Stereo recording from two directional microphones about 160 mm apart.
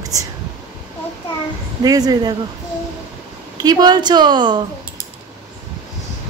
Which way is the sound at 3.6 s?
25° right (ahead or behind).